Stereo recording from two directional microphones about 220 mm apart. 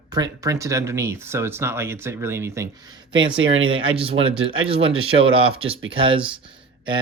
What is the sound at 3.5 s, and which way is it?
Speech, 65° right (ahead or behind).